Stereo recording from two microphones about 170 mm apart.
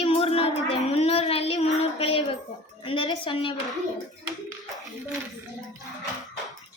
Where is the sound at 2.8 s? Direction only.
30° left (ahead or behind).